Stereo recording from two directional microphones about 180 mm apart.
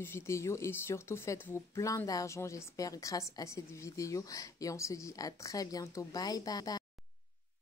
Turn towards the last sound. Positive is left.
turn(degrees=20)  # may be behind; listen again after turning